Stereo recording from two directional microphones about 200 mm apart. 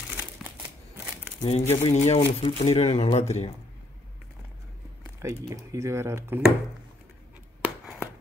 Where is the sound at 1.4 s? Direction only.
30° left (ahead or behind).